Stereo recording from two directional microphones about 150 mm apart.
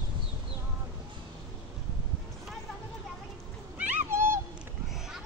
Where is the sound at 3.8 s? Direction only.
15° right (ahead or behind).